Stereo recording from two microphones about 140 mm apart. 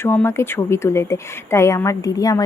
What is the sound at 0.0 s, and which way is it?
Speech, 15° left (ahead or behind).